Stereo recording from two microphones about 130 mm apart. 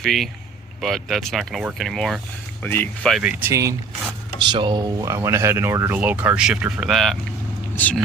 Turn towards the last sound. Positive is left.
turn(degrees=10)  # may be behind; listen again after turning